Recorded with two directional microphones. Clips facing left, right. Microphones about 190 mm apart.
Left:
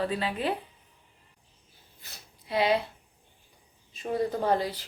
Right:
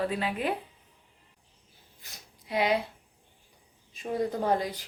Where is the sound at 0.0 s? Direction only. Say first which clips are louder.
Even; 10° right (ahead or behind).